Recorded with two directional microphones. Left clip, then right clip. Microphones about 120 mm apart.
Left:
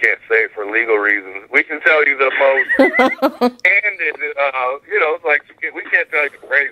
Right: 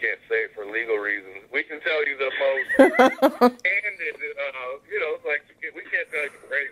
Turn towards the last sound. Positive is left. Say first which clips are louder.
# left 11 dB
turn(degrees=35)  # may be behind; listen again after turning